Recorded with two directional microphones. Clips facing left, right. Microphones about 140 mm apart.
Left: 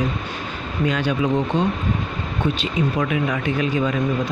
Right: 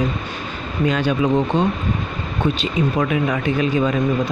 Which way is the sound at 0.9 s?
30° right (ahead or behind).